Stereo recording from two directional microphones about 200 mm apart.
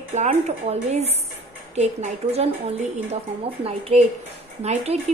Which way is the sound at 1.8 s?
35° right (ahead or behind).